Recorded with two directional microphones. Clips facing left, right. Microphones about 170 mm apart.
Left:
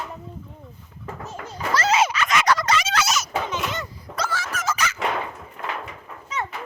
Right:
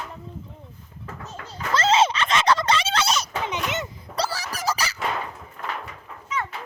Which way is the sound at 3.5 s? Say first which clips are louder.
Even; 20° right (ahead or behind).